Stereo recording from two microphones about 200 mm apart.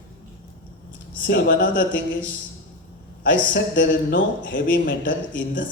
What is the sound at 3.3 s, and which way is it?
A man's voice, 65° left (ahead or behind).